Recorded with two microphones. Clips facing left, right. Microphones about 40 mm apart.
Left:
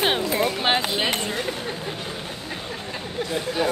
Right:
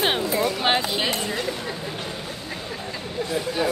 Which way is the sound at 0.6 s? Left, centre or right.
Centre.